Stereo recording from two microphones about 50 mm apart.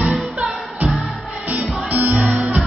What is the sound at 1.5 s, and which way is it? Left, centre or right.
Music, right.